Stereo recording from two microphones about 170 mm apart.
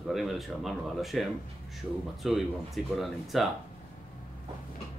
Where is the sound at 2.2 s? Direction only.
Centre (ahead or behind).